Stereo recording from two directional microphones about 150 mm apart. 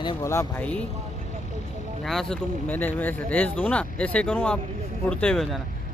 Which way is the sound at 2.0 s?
Centre (ahead or behind).